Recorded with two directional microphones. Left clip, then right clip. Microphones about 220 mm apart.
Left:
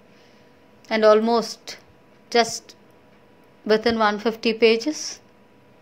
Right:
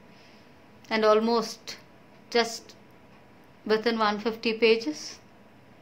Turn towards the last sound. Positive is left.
turn(degrees=25)  # may be behind; listen again after turning